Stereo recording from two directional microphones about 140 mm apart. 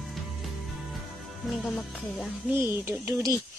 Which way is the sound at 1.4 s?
Centre (ahead or behind).